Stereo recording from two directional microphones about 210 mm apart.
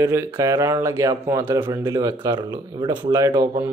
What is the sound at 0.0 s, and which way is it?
Speech, 15° right (ahead or behind).